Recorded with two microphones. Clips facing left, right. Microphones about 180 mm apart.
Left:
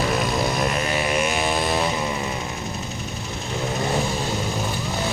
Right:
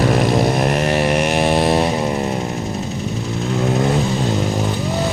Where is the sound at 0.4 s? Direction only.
55° right (ahead or behind); by 1.7 s 70° right (ahead or behind).